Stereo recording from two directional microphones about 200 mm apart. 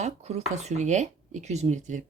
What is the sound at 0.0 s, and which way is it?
Speech, 30° right (ahead or behind).